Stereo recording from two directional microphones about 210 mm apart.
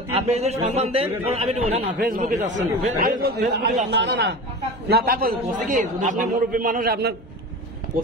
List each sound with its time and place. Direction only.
0.1 s a man's voice: 30° right (ahead or behind)
2.0 s a man's voice: 40° right (ahead or behind)